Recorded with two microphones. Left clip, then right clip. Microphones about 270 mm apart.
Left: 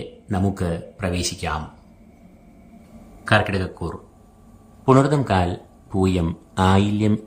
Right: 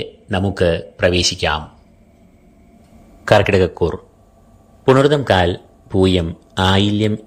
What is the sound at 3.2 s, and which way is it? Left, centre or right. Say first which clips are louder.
A man's voice: right 7 dB; centre.